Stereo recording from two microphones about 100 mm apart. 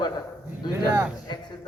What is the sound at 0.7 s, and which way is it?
Speech, 30° right (ahead or behind).